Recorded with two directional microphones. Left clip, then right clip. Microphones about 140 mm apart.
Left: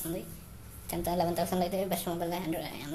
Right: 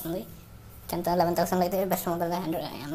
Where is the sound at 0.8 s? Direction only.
25° right (ahead or behind).